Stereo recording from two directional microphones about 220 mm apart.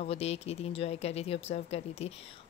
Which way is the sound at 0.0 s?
30° left (ahead or behind).